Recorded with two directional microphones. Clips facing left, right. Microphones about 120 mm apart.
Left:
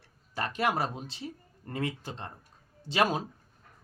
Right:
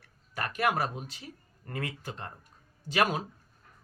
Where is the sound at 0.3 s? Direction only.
25° left (ahead or behind).